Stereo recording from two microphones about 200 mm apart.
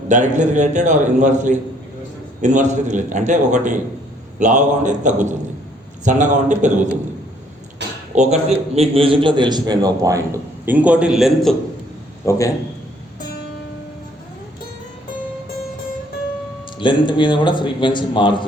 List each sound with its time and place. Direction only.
0.1 s a man's voice: 35° right (ahead or behind)
7.8 s a sound: 60° right (ahead or behind)
8.1 s a man's voice: 35° right (ahead or behind); by 11.5 s 5° right (ahead or behind)
12.2 s a man's voice: 15° left (ahead or behind)
16.7 s speech: 25° left (ahead or behind)